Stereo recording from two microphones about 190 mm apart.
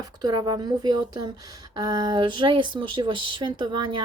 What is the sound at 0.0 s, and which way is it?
Speech, 20° right (ahead or behind).